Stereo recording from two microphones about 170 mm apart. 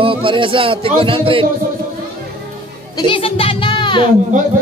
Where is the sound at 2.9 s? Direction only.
30° left (ahead or behind).